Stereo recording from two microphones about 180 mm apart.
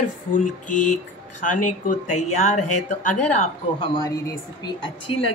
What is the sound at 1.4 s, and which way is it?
Speech, 45° left (ahead or behind).